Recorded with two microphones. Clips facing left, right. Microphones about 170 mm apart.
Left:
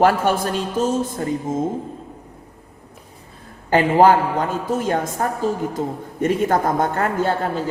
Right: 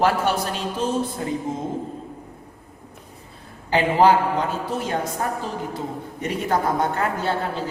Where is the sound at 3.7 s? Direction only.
45° left (ahead or behind).